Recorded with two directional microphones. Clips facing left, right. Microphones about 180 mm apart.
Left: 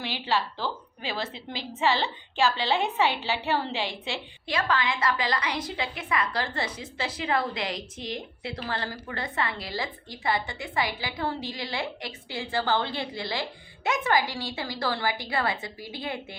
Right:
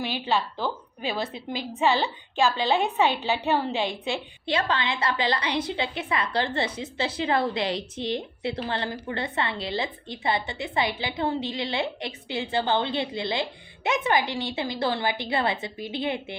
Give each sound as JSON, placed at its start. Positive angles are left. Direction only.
{"t": 0.0, "sound": "a woman's voice", "side_deg": -20}